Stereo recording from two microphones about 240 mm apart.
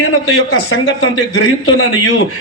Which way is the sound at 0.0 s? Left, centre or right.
Left.